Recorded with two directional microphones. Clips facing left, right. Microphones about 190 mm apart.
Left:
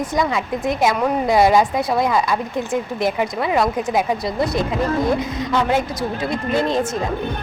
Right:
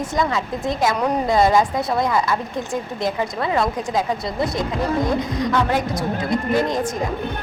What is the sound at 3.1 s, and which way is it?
Speech, 15° left (ahead or behind).